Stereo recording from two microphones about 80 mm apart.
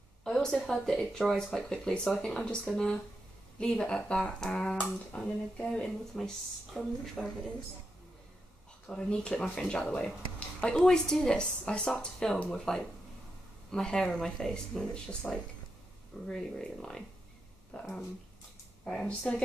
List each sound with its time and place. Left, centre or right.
0.2 s a woman's voice: centre
6.7 s speech: centre
8.8 s a woman's voice: centre